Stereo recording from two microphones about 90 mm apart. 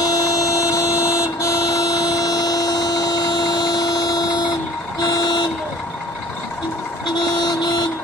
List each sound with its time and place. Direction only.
0.0 s vehicle: 40° left (ahead or behind)
7.4 s vehicle: 50° left (ahead or behind)